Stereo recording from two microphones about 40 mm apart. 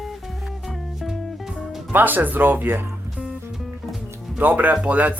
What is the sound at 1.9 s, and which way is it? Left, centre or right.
Speech, right.